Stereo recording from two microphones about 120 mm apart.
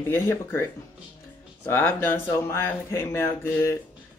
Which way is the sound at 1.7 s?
15° left (ahead or behind).